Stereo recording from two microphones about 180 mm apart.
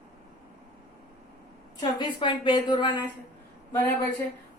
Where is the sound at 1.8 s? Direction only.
25° left (ahead or behind).